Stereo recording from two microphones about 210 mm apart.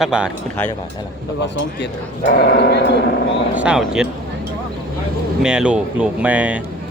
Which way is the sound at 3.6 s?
5° right (ahead or behind).